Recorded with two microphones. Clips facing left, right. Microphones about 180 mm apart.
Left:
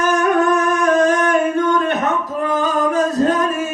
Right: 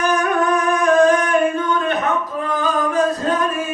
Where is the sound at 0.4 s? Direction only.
40° left (ahead or behind).